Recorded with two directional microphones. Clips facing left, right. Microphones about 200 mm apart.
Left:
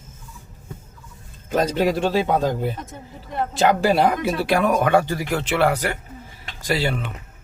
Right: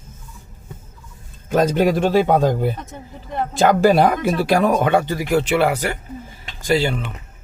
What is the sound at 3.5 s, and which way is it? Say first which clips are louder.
Speech: right 4 dB; 45° right (ahead or behind).